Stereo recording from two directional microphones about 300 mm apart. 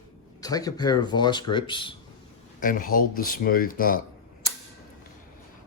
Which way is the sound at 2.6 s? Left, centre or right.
Left.